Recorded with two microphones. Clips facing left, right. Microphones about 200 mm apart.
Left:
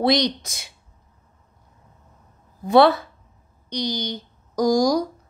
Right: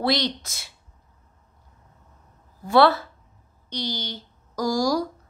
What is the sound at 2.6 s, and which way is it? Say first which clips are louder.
A woman's voice: left 3 dB; 15° left (ahead or behind).